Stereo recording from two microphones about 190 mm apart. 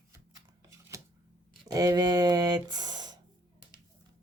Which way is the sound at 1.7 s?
20° right (ahead or behind).